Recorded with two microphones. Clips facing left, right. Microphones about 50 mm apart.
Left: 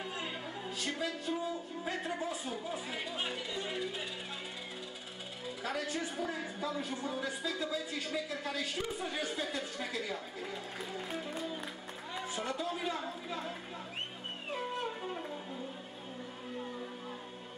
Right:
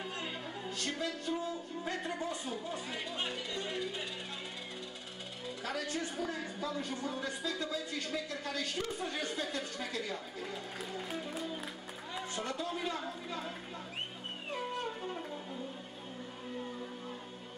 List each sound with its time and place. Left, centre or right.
0.0 s speech: centre
5.6 s a man's voice: centre
14.5 s music: centre